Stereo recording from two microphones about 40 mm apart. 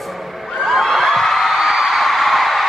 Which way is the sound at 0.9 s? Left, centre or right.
Centre.